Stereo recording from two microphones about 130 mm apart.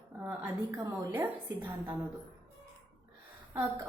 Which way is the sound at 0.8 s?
20° right (ahead or behind).